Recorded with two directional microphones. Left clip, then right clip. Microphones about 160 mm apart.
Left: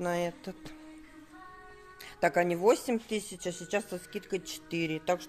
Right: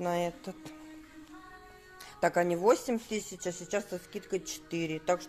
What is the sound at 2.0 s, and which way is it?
Speech, 20° left (ahead or behind).